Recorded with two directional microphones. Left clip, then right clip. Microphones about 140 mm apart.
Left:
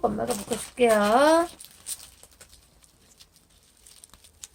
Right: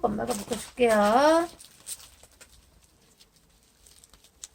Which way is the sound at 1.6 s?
30° left (ahead or behind).